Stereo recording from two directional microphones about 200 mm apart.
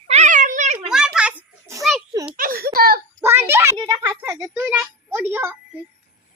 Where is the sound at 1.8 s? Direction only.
Centre (ahead or behind).